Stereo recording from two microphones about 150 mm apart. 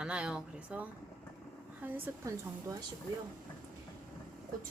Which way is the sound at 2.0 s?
20° right (ahead or behind).